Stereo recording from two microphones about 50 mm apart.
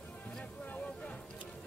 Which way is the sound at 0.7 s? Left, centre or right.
Left.